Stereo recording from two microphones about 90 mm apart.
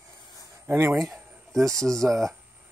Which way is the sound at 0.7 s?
25° right (ahead or behind).